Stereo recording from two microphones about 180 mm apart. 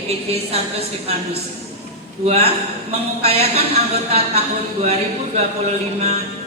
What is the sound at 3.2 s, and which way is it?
Speech, 35° right (ahead or behind).